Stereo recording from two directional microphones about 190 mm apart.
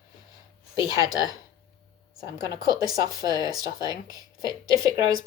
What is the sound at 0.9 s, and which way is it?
Speech, 20° right (ahead or behind).